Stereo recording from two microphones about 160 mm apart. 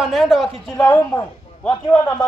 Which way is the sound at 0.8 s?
20° left (ahead or behind).